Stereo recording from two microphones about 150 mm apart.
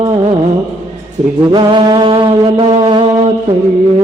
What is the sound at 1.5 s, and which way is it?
Mantra, 30° right (ahead or behind).